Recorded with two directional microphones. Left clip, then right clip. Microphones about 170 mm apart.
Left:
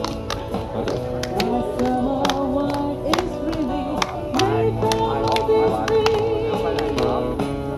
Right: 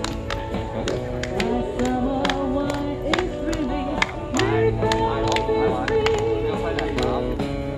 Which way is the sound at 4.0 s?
70° left (ahead or behind).